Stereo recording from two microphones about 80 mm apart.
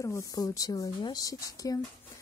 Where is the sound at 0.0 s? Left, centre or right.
Left.